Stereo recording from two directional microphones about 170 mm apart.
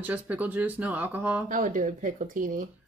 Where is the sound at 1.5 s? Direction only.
50° right (ahead or behind).